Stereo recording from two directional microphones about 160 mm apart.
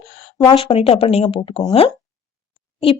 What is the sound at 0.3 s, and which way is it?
A woman's voice, 30° left (ahead or behind).